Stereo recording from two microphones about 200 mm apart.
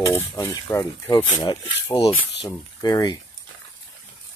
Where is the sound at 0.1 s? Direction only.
10° left (ahead or behind).